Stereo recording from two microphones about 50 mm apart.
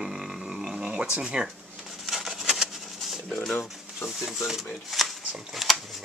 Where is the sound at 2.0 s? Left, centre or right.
Centre.